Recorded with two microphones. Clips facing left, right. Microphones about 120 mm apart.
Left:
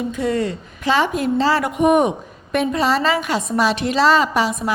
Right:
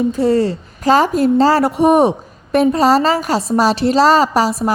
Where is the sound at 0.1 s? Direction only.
35° right (ahead or behind).